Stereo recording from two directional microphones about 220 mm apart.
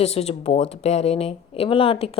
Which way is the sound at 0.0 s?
30° left (ahead or behind).